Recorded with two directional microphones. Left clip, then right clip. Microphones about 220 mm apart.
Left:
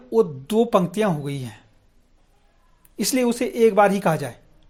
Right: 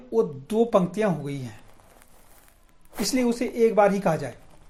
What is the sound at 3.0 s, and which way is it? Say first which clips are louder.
Speech: left 3 dB; 40° left (ahead or behind).